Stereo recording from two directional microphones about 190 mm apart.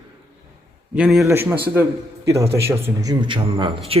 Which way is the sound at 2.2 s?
15° right (ahead or behind).